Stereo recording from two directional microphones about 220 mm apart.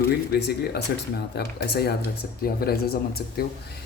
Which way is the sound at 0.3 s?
45° left (ahead or behind).